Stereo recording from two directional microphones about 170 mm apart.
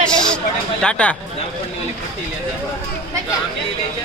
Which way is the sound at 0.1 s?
5° left (ahead or behind).